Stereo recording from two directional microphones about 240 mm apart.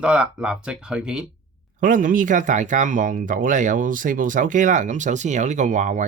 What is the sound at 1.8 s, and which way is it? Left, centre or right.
Speech, right.